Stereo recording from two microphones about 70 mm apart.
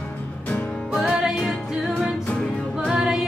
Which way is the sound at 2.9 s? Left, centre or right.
Centre.